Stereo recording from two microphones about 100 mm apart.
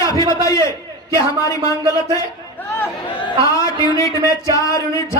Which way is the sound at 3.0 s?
50° left (ahead or behind).